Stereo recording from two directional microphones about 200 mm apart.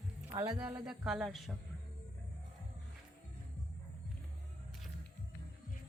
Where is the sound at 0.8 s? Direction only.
5° right (ahead or behind).